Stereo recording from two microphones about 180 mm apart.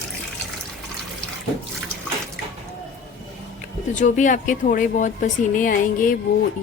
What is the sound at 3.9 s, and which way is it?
Speech, 45° left (ahead or behind).